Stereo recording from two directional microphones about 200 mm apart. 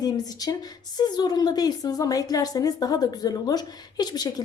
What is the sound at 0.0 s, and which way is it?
A woman's voice, 20° left (ahead or behind).